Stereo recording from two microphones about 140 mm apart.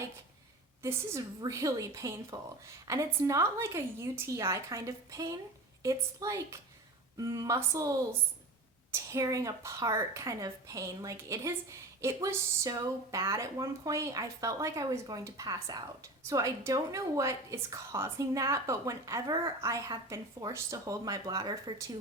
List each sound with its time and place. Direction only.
0.8 s a woman's voice: 20° right (ahead or behind)